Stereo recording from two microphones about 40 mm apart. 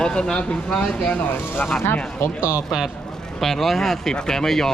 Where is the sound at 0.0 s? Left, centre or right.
Left.